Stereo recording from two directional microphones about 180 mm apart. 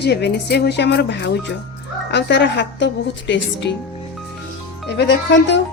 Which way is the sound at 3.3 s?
90° left.